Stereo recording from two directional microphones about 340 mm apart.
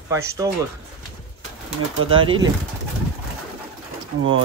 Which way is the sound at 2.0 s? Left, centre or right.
Centre.